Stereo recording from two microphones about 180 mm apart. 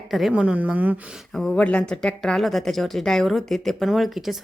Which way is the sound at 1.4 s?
5° left (ahead or behind).